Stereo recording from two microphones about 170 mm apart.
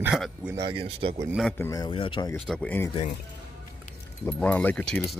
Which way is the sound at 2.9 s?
40° left (ahead or behind).